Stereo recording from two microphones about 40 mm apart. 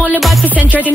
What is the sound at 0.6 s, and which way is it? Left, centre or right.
Music, left.